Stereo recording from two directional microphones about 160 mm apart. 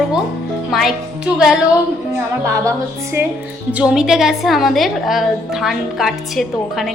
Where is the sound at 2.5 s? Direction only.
20° right (ahead or behind).